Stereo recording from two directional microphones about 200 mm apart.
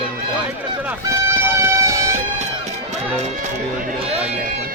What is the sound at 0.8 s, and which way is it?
Speech, 10° right (ahead or behind).